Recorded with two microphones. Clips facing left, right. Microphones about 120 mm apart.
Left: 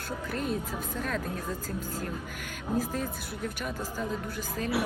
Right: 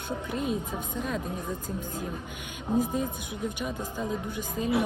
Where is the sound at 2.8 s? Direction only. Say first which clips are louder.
Right 3 dB; 20° right (ahead or behind).